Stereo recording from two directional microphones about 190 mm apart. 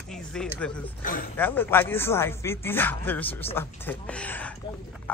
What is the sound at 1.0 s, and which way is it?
Speech, 45° left (ahead or behind).